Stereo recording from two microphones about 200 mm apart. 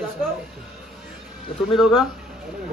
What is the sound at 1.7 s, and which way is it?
Speech, centre (ahead or behind).